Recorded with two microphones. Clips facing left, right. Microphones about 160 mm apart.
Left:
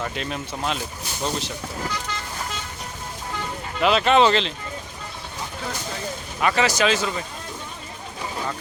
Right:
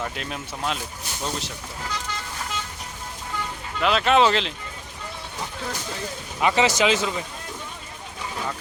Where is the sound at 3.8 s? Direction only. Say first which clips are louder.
Left 2 dB; centre (ahead or behind).